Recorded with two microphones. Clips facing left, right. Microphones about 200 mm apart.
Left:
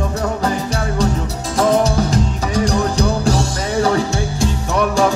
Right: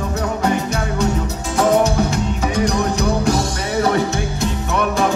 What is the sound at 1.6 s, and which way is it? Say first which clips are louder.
Music: even; 35° left (ahead or behind).